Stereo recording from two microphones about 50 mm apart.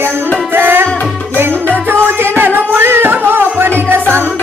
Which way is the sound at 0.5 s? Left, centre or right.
Right.